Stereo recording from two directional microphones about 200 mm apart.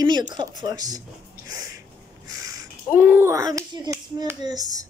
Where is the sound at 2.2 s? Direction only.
15° right (ahead or behind).